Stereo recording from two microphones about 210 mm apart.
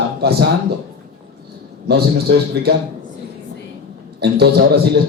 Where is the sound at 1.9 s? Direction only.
50° right (ahead or behind).